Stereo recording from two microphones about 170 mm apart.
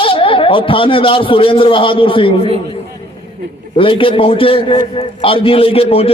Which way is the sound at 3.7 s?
30° left (ahead or behind).